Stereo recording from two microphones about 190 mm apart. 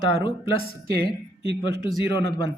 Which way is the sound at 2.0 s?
20° left (ahead or behind).